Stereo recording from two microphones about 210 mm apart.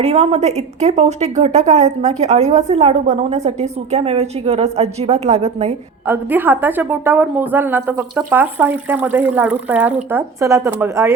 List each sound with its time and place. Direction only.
0.0 s speech: 30° right (ahead or behind)
6.1 s a woman's voice: 10° right (ahead or behind)